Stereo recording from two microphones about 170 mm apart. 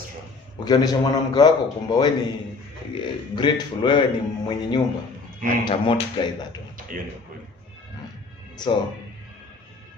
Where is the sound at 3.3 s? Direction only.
30° left (ahead or behind).